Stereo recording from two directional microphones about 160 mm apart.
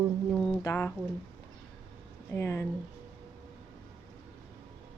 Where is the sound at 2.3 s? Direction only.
15° left (ahead or behind).